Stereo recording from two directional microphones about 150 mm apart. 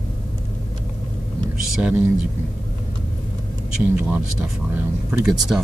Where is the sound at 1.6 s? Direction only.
5° right (ahead or behind).